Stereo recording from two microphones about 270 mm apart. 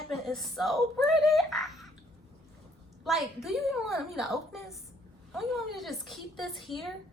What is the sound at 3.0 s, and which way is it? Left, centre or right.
A woman's voice, centre.